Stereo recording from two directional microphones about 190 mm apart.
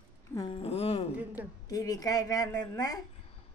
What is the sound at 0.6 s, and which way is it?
Speech, 30° left (ahead or behind).